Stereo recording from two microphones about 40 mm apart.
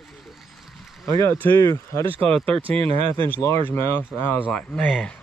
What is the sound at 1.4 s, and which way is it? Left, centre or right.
Speech, left.